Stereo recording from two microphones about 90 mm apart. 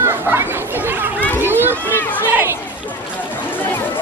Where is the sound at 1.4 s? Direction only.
25° right (ahead or behind).